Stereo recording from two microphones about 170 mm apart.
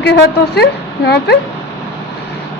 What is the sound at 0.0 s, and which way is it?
A woman's voice, 80° left.